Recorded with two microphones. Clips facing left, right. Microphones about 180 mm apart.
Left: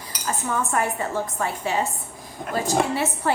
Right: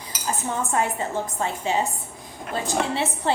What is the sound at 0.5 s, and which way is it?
A woman's voice, 25° right (ahead or behind).